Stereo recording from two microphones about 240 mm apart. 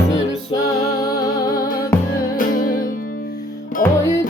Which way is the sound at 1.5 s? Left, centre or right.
Centre.